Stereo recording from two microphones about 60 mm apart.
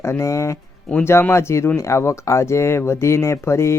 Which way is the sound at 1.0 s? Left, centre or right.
Left.